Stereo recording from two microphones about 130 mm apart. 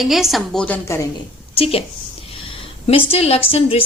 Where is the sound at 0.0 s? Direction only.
Centre (ahead or behind).